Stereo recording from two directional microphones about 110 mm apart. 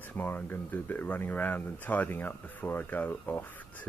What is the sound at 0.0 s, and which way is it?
Speech, 20° left (ahead or behind).